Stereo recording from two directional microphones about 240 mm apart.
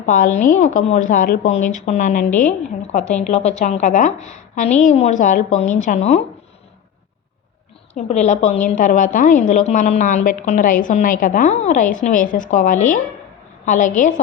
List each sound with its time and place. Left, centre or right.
0.0 s speech: left
7.9 s speech: left